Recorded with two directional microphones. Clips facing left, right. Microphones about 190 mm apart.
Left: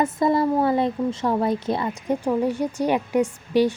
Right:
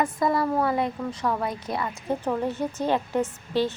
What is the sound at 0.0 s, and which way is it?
Speech, 25° left (ahead or behind).